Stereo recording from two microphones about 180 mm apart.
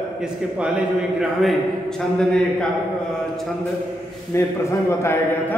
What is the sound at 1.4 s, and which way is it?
A man's voice, centre (ahead or behind).